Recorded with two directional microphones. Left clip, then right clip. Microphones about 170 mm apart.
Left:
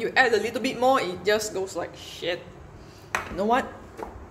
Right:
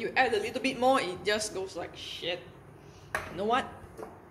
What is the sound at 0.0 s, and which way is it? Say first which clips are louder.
A woman's voice: left 6 dB; 20° left (ahead or behind).